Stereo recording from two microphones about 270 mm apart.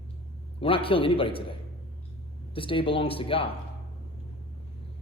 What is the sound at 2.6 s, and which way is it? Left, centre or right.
Speech, centre.